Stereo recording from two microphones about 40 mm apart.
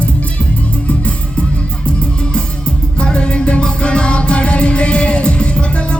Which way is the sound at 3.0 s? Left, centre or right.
Left.